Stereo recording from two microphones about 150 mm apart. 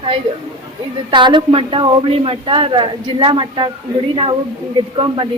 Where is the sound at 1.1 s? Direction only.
30° right (ahead or behind).